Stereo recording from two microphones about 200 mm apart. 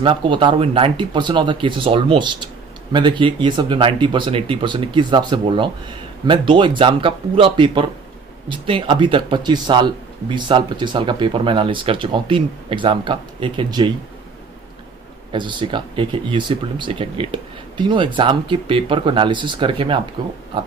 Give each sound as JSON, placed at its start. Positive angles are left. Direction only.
{"t": 0.0, "sound": "speech", "side_deg": -25}
{"t": 15.3, "sound": "speech", "side_deg": -25}